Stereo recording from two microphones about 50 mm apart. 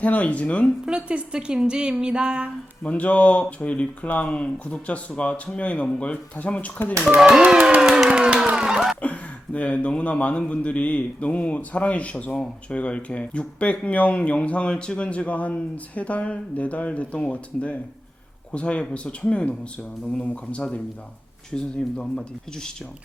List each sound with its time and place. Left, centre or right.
0.0 s speech: left
0.9 s speech: right
2.8 s speech: left
7.2 s a sound: centre
9.0 s speech: left